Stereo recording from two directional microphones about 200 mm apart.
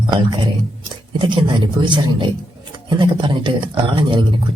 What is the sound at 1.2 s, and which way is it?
Speech, 25° right (ahead or behind).